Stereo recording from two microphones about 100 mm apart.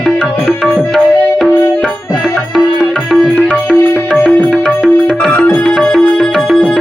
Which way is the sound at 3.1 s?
Centre (ahead or behind).